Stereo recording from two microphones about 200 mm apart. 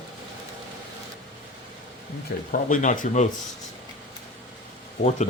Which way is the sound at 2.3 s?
50° left (ahead or behind).